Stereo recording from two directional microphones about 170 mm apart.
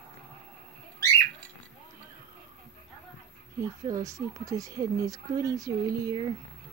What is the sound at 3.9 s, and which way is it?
Speech, 20° right (ahead or behind).